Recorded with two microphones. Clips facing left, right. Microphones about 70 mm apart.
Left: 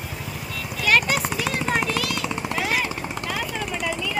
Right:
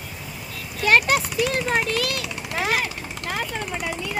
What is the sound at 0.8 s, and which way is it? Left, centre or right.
Clip-clop, right.